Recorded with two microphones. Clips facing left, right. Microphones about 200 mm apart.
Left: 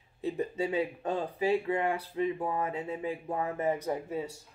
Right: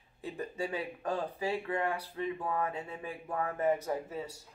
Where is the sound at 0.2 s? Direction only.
20° left (ahead or behind).